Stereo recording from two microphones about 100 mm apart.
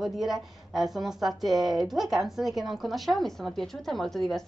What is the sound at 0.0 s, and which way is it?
Speech, 5° right (ahead or behind).